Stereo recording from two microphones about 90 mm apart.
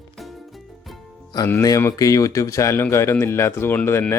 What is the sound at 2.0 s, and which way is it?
Speech, 40° left (ahead or behind).